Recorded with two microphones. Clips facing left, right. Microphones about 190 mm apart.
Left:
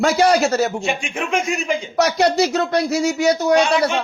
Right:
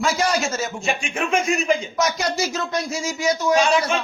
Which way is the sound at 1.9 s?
65° left (ahead or behind).